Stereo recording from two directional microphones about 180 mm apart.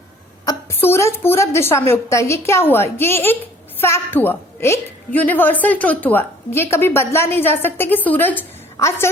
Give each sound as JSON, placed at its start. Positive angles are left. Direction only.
{"t": 0.4, "sound": "a woman's voice", "side_deg": 15}